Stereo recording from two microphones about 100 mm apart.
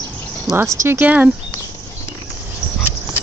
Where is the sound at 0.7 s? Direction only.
25° right (ahead or behind).